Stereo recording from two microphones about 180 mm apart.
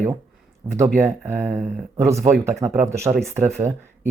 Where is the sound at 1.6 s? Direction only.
45° right (ahead or behind).